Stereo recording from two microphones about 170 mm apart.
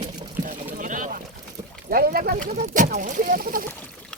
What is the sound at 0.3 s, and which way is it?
Boat, 50° right (ahead or behind).